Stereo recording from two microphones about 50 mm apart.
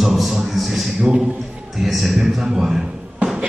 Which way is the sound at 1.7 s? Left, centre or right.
Centre.